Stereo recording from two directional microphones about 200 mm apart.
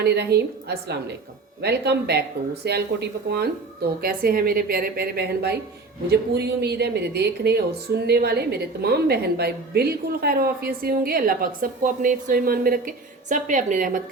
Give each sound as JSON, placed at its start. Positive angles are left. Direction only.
{"t": 0.0, "sound": "speech", "side_deg": -55}